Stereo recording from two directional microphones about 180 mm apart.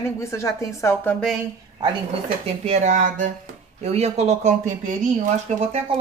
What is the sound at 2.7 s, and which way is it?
Speech, 40° right (ahead or behind).